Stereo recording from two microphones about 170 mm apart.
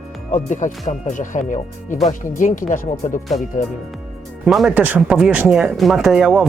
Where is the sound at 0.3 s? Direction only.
45° left (ahead or behind).